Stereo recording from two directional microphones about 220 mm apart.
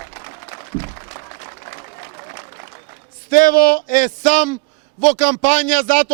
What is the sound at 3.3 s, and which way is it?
A man's voice, 40° left (ahead or behind).